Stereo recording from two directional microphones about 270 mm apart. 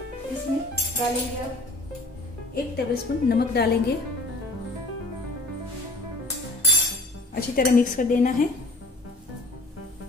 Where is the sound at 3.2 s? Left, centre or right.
Left.